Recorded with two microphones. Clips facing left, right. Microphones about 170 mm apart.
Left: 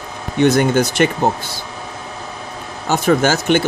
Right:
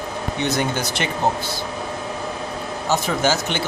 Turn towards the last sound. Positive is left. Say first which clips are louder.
# left 6 dB
turn(degrees=55)  # may be behind; listen again after turning